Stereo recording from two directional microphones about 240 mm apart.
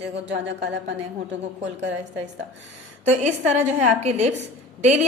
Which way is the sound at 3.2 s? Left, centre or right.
Right.